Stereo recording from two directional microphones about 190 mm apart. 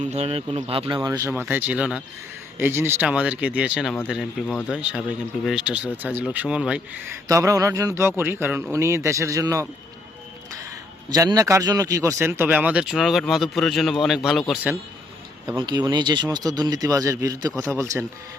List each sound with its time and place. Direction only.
0.0 s speech: 35° right (ahead or behind); by 9.6 s 15° right (ahead or behind)
11.1 s speech: 20° right (ahead or behind); by 14.8 s centre (ahead or behind)
15.4 s speech: 20° right (ahead or behind)